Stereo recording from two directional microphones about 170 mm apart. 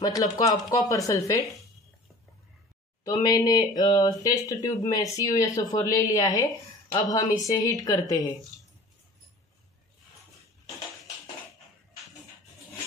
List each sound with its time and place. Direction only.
0.0 s speech: 20° left (ahead or behind)
3.1 s speech: 20° left (ahead or behind)